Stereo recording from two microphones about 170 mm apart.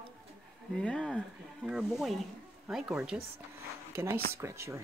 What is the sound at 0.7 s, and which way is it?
Speech, 5° left (ahead or behind).